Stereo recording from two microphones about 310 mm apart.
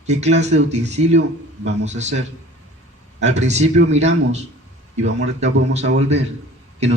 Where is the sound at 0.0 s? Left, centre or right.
Right.